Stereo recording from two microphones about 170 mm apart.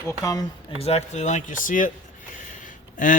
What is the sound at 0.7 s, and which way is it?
Speech, 35° left (ahead or behind).